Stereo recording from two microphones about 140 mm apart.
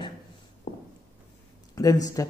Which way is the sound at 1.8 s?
25° left (ahead or behind).